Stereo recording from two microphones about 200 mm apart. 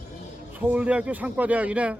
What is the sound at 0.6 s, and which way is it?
A man's voice, 5° right (ahead or behind).